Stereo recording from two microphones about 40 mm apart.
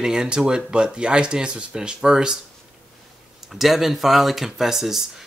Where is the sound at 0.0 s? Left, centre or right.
Centre.